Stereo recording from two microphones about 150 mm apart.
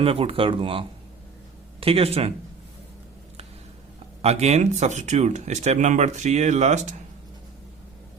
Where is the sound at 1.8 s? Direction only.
40° right (ahead or behind).